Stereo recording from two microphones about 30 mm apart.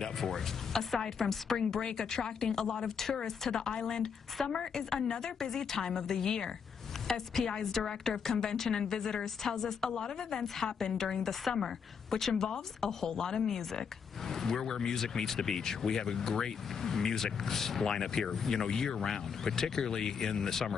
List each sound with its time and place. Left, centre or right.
0.0 s a woman's voice: centre
1.6 s speech: left
9.8 s speech: left
13.5 s speech: centre